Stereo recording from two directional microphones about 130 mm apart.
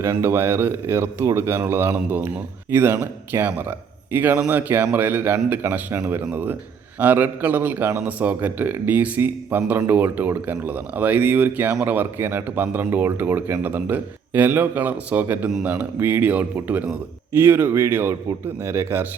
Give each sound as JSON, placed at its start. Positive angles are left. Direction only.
{"t": 0.0, "sound": "a man's voice", "side_deg": -20}